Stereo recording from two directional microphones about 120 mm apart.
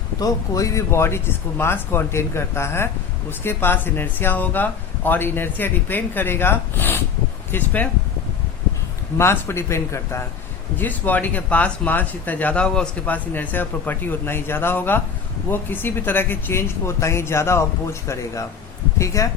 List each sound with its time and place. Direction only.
0.2 s speech: 30° left (ahead or behind)
9.1 s speech: 20° left (ahead or behind)